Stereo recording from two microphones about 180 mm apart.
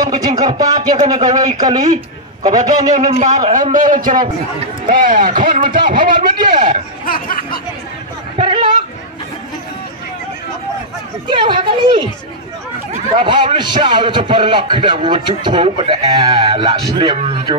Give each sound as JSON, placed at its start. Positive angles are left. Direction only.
{"t": 0.0, "sound": "speech", "side_deg": -20}
{"t": 3.5, "sound": "speech", "side_deg": -45}
{"t": 6.3, "sound": "speech", "side_deg": -25}
{"t": 7.1, "sound": "a sound", "side_deg": 50}
{"t": 8.4, "sound": "chatter", "side_deg": -25}
{"t": 11.2, "sound": "speech", "side_deg": -25}